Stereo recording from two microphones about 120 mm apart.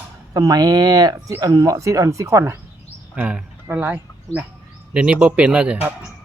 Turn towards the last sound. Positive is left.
turn(degrees=-10)  # may be behind; listen again after turning